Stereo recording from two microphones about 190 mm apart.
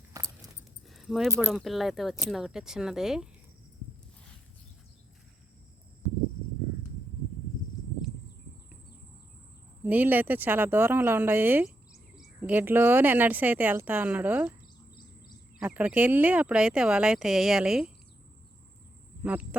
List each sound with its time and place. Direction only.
0.1 s a sound: 20° right (ahead or behind)
0.9 s keys jangling: centre (ahead or behind)
1.5 s speech: centre (ahead or behind)
9.8 s speech: 10° right (ahead or behind)
15.5 s speech: 10° right (ahead or behind)
19.2 s speech: 5° right (ahead or behind)